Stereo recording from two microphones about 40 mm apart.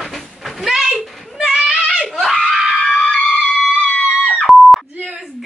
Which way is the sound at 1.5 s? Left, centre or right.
Centre.